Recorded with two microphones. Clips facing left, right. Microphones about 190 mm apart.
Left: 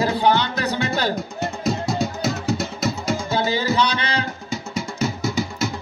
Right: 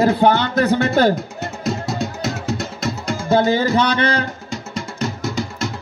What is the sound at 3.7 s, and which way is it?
Speech, 50° right (ahead or behind).